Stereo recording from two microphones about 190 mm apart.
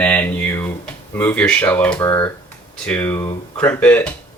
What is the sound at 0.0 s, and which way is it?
Speech, 10° left (ahead or behind).